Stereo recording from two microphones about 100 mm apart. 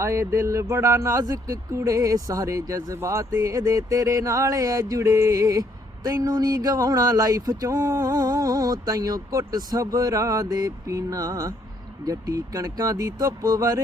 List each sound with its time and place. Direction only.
0.0 s speech: 30° right (ahead or behind)